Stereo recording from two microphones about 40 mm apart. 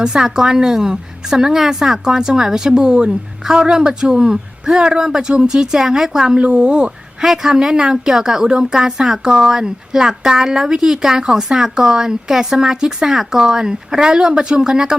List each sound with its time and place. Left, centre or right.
0.0 s speech: centre
6.4 s a woman's voice: right
7.2 s speech: centre